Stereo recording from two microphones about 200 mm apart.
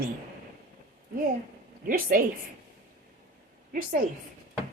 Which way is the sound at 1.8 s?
45° right (ahead or behind).